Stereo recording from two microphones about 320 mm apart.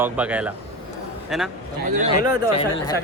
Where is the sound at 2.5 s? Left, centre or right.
Centre.